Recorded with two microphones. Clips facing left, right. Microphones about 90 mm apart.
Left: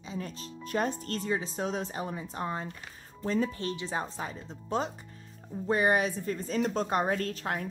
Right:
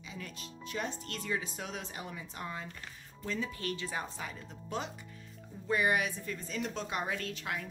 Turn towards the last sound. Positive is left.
turn(degrees=40)  # may be behind; listen again after turning